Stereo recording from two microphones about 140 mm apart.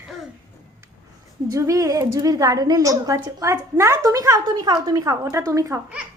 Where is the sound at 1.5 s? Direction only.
20° right (ahead or behind).